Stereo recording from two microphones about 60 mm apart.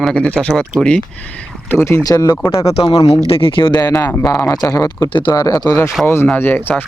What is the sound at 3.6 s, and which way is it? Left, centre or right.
Speech, left.